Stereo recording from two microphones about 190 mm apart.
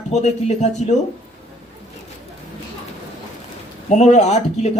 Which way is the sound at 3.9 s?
35° left (ahead or behind).